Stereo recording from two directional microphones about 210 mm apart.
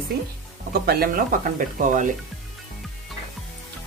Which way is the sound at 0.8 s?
45° right (ahead or behind).